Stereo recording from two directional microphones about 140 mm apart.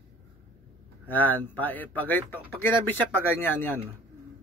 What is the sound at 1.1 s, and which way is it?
A man's voice, 15° left (ahead or behind).